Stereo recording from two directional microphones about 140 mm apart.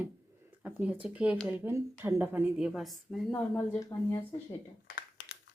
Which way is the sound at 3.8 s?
25° left (ahead or behind).